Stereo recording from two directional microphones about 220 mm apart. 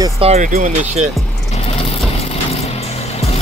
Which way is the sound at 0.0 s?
25° right (ahead or behind).